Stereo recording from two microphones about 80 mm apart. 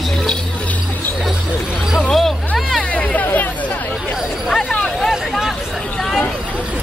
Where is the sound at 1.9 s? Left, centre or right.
Centre.